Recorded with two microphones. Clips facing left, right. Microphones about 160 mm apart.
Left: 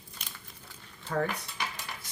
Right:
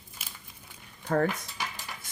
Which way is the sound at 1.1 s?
50° right (ahead or behind).